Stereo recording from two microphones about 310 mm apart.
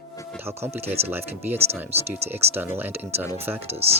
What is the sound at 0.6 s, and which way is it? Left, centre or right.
Speech, centre.